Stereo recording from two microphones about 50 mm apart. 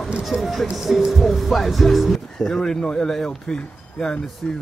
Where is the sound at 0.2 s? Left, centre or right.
Centre.